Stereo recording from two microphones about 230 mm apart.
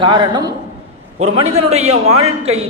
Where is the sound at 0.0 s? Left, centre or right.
Centre.